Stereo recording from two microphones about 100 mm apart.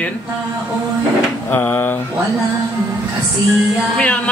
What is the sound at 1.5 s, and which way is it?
Speech, 20° left (ahead or behind).